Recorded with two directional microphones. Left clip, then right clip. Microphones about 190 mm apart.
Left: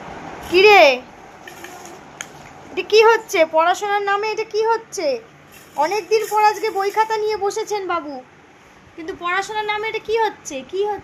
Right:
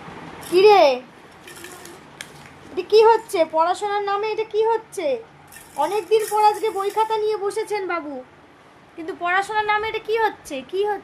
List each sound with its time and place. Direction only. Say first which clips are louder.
0.5 s a child's voice: left 3 dB; 5° right (ahead or behind)
2.7 s a woman's voice: left 1 dB; 5° right (ahead or behind); by 11.0 s 30° right (ahead or behind)